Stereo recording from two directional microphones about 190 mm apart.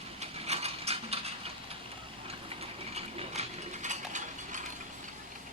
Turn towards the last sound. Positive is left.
turn(degrees=-40)  # may be behind; listen again after turning